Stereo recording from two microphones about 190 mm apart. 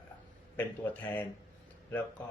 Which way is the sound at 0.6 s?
10° left (ahead or behind).